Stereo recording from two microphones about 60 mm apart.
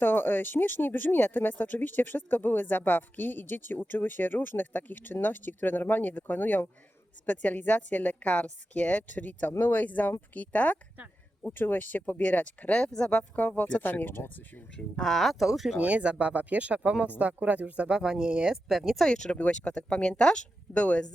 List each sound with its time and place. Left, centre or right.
0.0 s a woman's voice: left
14.9 s speech: centre
15.8 s speech: right
18.9 s a woman's voice: centre